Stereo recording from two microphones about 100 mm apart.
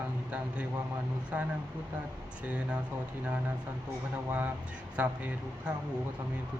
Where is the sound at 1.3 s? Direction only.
15° right (ahead or behind).